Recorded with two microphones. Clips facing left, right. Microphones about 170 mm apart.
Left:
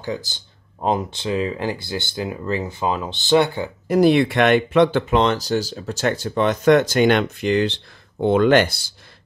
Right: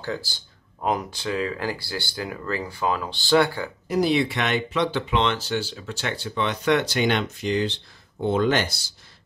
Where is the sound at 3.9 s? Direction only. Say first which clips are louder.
Left 6 dB; 55° left (ahead or behind).